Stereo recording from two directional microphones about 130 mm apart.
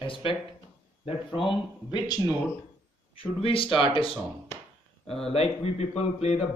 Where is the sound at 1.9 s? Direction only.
30° left (ahead or behind).